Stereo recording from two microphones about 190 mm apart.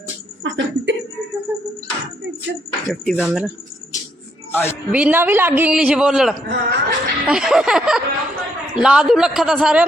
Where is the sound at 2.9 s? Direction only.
Centre (ahead or behind).